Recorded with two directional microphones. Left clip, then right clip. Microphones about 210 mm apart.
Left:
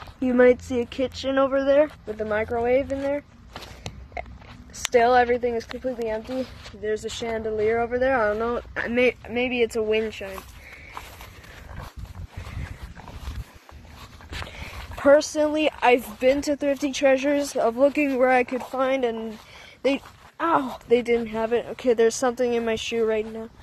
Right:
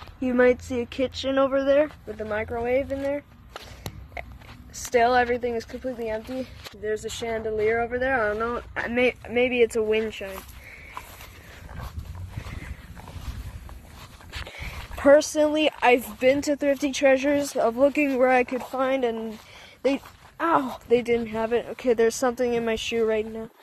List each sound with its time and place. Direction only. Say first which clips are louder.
0.2 s speech: left 3 dB; centre (ahead or behind)
2.1 s speech: left 4 dB; 15° left (ahead or behind)
4.7 s speech: left 2 dB; centre (ahead or behind)
14.6 s speech: even; 15° right (ahead or behind)
20.3 s speech: even; 5° right (ahead or behind)